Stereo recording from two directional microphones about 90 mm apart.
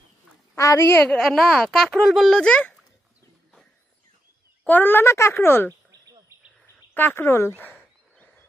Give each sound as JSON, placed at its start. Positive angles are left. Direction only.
{"t": 0.5, "sound": "a woman's voice", "side_deg": 35}
{"t": 1.0, "sound": "speech", "side_deg": 5}
{"t": 4.6, "sound": "speech", "side_deg": 20}
{"t": 5.9, "sound": "bird vocalization", "side_deg": -40}
{"t": 6.9, "sound": "speech", "side_deg": 25}
{"t": 8.2, "sound": "frog", "side_deg": 15}